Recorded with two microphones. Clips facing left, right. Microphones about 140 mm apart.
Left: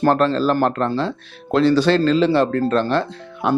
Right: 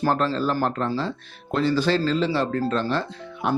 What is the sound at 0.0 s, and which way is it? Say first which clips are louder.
Speech: left 6 dB; 70° left (ahead or behind).